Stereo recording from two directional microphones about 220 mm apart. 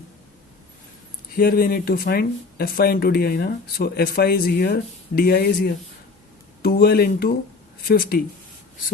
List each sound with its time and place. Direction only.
1.4 s speech: 40° left (ahead or behind)